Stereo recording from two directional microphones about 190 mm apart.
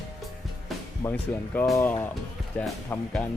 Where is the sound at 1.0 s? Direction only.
5° left (ahead or behind).